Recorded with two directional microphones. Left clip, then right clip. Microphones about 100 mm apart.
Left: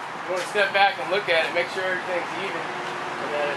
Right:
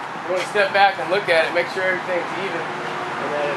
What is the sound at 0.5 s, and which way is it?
Speech, 10° right (ahead or behind).